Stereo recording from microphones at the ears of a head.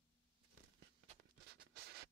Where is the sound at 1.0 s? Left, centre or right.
Right.